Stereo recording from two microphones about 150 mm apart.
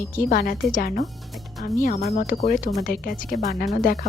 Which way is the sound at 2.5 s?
65° left (ahead or behind).